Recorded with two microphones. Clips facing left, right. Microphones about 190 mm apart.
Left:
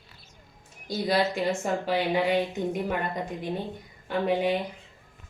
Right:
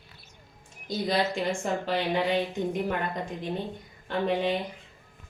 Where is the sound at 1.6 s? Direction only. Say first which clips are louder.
Left 2 dB; 10° left (ahead or behind).